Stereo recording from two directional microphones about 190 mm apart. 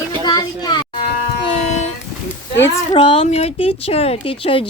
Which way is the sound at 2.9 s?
30° left (ahead or behind).